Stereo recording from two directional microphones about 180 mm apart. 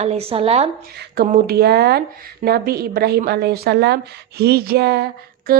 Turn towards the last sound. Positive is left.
turn(degrees=-65)  # may be behind; listen again after turning